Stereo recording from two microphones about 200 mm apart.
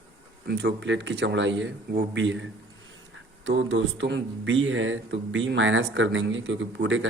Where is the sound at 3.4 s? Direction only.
70° right (ahead or behind).